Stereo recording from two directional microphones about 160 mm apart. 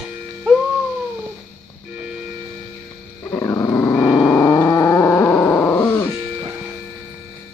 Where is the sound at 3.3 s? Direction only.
15° left (ahead or behind).